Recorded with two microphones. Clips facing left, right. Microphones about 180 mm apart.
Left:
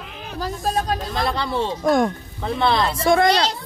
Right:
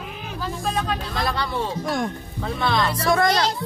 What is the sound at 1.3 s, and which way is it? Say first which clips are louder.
Speech: left 2 dB; 25° left (ahead or behind).